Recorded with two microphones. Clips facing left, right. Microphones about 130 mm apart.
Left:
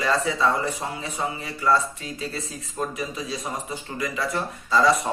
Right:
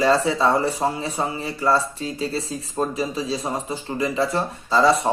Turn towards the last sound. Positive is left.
turn(degrees=-30)  # may be behind; listen again after turning